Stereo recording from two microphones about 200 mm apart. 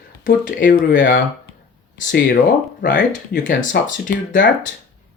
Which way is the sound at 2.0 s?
40° left (ahead or behind).